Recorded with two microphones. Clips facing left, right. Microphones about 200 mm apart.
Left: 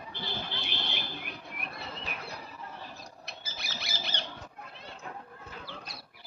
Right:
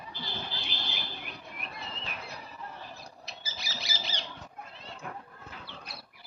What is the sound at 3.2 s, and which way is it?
Owl, 60° left (ahead or behind).